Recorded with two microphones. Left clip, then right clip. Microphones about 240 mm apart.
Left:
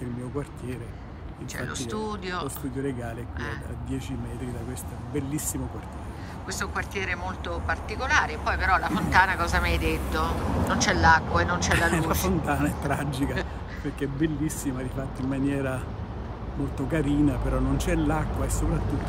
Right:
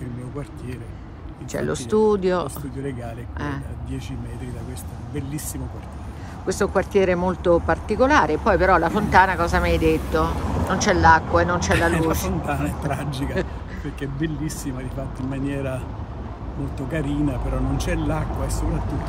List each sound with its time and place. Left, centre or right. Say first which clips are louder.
1.5 s speech: right 10 dB; centre
6.4 s speech: right 10 dB; centre
10.3 s vehicle: right 2 dB; right
10.7 s speech: right 5 dB; centre